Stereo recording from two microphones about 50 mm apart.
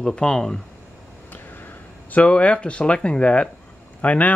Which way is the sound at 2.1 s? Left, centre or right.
Left.